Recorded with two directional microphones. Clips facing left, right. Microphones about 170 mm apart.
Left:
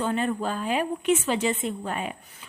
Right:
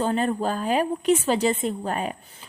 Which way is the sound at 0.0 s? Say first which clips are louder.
Right 3 dB; 35° right (ahead or behind).